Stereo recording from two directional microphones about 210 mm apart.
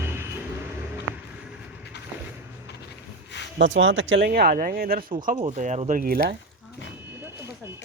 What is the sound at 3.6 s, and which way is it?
Speech, 65° right (ahead or behind).